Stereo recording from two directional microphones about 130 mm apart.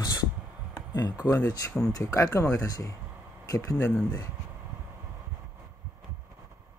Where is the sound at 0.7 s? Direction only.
30° left (ahead or behind).